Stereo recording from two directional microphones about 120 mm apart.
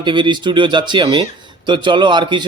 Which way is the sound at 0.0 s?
40° right (ahead or behind).